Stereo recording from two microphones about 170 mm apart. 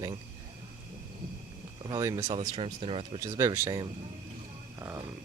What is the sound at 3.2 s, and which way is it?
Speech, 20° right (ahead or behind).